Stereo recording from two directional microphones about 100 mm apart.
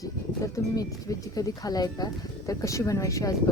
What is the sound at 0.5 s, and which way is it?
Speech, 35° left (ahead or behind).